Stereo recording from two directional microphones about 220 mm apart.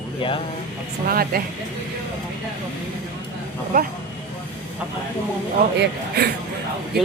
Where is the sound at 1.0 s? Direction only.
40° right (ahead or behind).